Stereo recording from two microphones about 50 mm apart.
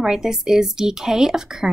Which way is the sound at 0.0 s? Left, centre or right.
Centre.